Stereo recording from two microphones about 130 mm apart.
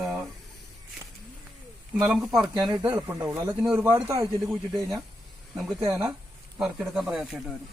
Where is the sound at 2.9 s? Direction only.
25° right (ahead or behind).